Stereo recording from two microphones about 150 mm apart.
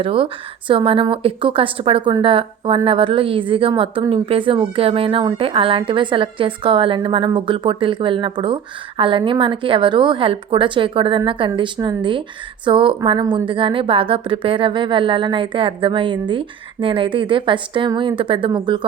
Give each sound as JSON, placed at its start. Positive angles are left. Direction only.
{"t": 0.0, "sound": "speech", "side_deg": -35}